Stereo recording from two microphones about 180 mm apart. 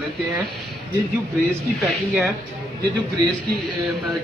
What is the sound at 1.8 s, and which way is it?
Speech, centre (ahead or behind).